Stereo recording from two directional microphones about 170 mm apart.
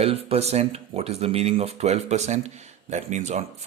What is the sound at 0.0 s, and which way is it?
Speech, 35° right (ahead or behind).